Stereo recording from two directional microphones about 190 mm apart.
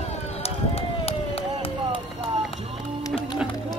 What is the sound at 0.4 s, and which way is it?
Run, 30° left (ahead or behind).